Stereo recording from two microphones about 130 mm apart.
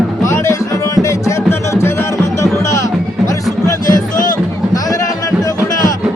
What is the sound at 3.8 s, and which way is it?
Music, 90° left.